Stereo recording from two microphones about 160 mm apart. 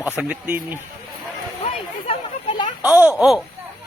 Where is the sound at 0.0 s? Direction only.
10° right (ahead or behind).